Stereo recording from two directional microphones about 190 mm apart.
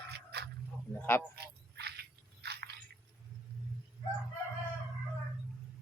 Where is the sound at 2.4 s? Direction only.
60° right (ahead or behind).